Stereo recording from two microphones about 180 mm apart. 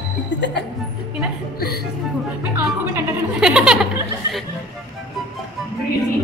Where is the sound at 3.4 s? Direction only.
5° right (ahead or behind).